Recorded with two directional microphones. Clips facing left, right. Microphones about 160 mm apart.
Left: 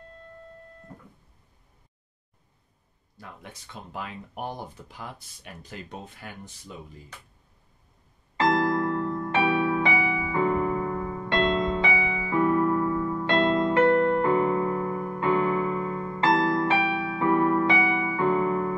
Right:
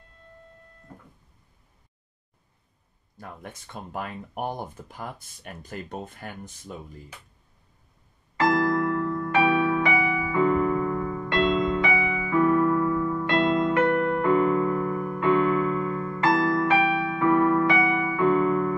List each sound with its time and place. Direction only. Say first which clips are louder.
3.7 s speech: right 3 dB; 50° right (ahead or behind)
8.4 s music: right 1 dB; 25° left (ahead or behind)